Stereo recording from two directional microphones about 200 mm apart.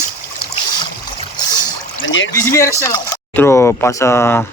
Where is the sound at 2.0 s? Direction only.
70° left (ahead or behind).